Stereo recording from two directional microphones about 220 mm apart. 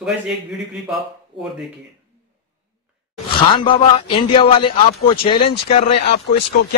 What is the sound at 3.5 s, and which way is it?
A man's voice, 25° left (ahead or behind).